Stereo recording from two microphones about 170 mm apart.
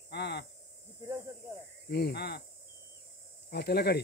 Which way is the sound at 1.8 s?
75° left (ahead or behind).